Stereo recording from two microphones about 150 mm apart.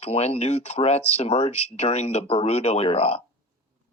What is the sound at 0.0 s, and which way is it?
Speech, 45° left (ahead or behind).